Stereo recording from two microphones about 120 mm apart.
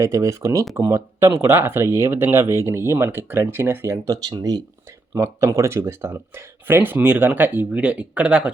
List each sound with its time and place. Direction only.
0.0 s speech: 25° right (ahead or behind)
5.1 s speech: 25° right (ahead or behind)